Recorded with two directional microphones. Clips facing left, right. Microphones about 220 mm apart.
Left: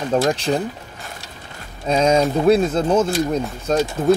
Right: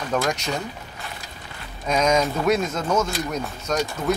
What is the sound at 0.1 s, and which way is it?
Speech, 30° left (ahead or behind).